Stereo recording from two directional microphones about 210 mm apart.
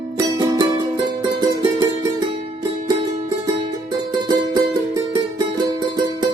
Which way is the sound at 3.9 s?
20° right (ahead or behind).